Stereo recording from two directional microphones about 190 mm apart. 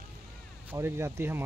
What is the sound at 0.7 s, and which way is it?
Speech, 15° right (ahead or behind).